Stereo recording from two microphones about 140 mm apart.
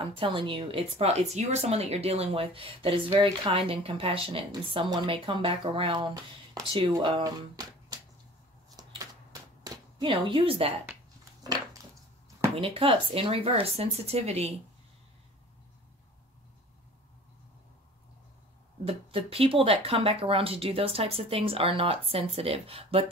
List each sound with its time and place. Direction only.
0.2 s speech: 35° right (ahead or behind)
8.7 s a sound: 25° right (ahead or behind)
12.5 s speech: 40° right (ahead or behind)
18.9 s speech: 45° right (ahead or behind)